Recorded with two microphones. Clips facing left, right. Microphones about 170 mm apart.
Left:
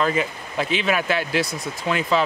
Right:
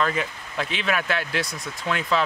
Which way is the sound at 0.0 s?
5° left (ahead or behind).